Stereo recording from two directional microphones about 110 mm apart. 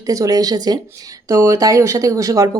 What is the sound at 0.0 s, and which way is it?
Speech, 30° right (ahead or behind).